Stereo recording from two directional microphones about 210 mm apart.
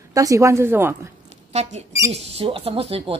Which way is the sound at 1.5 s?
30° right (ahead or behind).